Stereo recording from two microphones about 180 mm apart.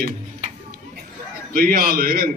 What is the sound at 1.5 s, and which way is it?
Speech, 55° right (ahead or behind).